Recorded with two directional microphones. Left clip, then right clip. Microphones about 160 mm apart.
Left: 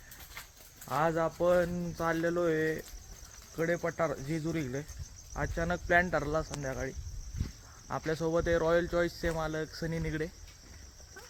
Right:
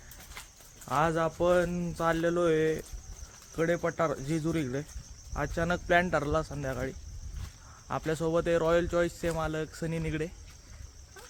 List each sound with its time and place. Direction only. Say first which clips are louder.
0.9 s speech: right 2 dB; 10° right (ahead or behind)